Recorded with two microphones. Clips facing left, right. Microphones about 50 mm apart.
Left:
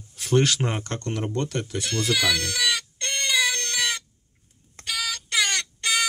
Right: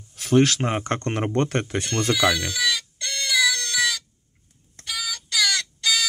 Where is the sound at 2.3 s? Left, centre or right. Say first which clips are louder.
Right 1 dB; left.